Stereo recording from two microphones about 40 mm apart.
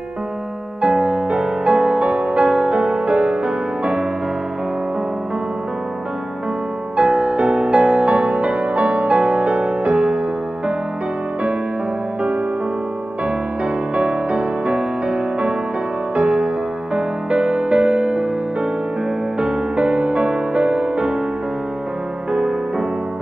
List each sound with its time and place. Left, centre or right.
0.8 s music: right
7.0 s music: right
13.9 s music: right
19.4 s music: right